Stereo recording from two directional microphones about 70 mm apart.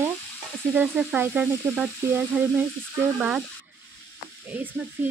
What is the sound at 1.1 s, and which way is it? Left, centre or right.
Frying, right.